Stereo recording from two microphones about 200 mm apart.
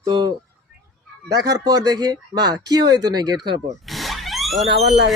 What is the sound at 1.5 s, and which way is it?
Speech, 20° right (ahead or behind).